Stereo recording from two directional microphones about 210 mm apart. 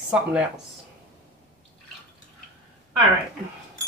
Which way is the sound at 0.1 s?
5° right (ahead or behind).